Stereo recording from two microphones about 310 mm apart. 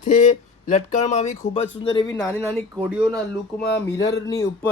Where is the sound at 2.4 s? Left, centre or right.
Centre.